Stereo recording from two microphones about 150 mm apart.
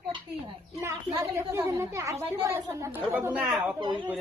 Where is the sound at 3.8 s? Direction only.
35° right (ahead or behind).